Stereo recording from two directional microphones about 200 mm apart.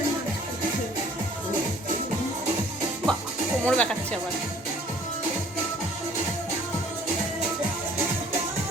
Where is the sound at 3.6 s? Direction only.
5° left (ahead or behind).